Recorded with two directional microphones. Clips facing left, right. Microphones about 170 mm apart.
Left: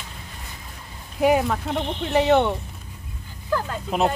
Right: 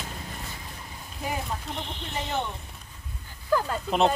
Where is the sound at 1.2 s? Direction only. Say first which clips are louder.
Left 13 dB; 75° left (ahead or behind).